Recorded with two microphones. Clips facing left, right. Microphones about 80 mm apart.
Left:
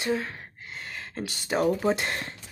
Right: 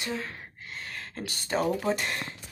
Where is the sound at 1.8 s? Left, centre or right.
Left.